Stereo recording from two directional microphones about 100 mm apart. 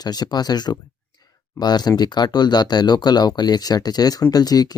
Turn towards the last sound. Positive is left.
turn(degrees=40)  # may be behind; listen again after turning